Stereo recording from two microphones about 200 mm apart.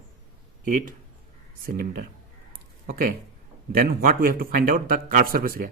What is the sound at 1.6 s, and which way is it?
Speech, 45° right (ahead or behind).